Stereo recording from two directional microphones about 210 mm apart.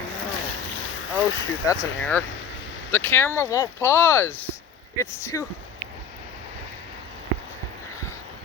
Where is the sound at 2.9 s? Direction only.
10° left (ahead or behind).